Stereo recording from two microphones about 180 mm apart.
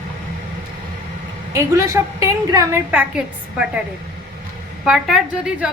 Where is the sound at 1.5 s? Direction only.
15° right (ahead or behind).